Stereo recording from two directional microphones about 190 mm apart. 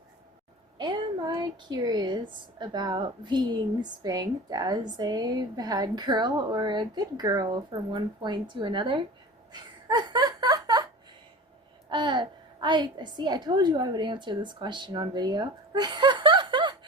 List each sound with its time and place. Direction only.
0.8 s a woman's voice: 25° right (ahead or behind)
9.5 s a sound: 20° right (ahead or behind)
11.9 s a woman's voice: 25° right (ahead or behind)